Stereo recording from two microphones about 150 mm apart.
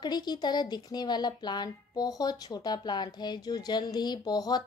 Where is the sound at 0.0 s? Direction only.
30° left (ahead or behind).